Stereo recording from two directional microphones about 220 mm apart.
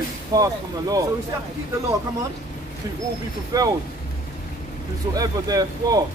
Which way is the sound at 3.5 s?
15° right (ahead or behind).